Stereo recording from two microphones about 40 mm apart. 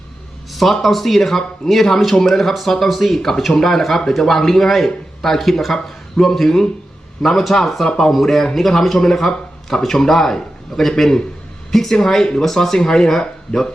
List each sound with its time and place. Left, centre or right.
0.5 s a man's voice: centre
7.9 s a man's voice: centre